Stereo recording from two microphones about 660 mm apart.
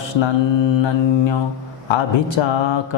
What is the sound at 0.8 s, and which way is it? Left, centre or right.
Speech, left.